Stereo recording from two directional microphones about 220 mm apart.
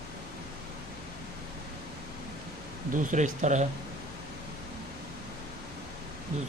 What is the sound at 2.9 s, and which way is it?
Speech, 35° right (ahead or behind).